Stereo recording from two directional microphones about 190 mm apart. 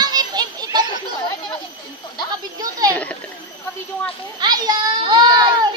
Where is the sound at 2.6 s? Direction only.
20° right (ahead or behind).